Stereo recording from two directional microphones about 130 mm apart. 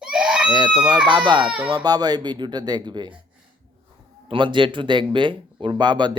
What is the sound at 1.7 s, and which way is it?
Speech, 30° right (ahead or behind).